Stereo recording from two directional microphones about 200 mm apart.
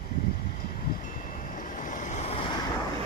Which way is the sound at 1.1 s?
40° left (ahead or behind).